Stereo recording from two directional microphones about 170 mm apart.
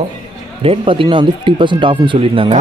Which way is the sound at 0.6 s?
30° right (ahead or behind).